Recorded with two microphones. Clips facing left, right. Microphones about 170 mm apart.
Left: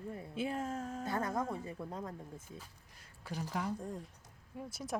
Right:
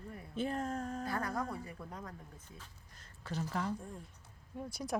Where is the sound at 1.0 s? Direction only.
20° left (ahead or behind).